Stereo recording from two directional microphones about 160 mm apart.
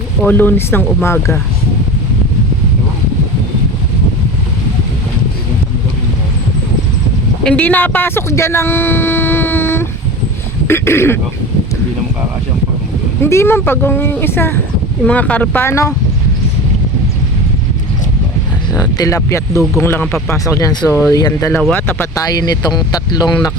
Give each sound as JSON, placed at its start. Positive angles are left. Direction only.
{"t": 0.2, "sound": "speech", "side_deg": 10}
{"t": 7.4, "sound": "speech", "side_deg": 10}
{"t": 13.2, "sound": "speech", "side_deg": 15}
{"t": 18.7, "sound": "speech", "side_deg": 20}
{"t": 21.6, "sound": "speech", "side_deg": 10}